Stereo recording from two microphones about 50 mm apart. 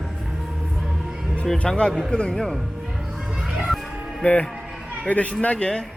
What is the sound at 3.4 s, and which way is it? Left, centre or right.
Music, centre.